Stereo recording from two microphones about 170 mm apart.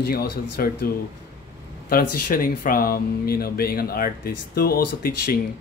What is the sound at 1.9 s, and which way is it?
Speech, 55° left (ahead or behind).